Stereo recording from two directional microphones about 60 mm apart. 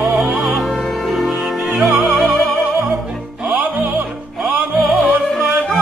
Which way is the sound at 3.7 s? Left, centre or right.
Right.